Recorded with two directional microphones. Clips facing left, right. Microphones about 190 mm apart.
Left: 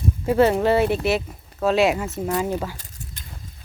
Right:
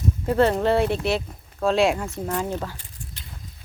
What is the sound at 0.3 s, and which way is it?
Speech, 10° left (ahead or behind).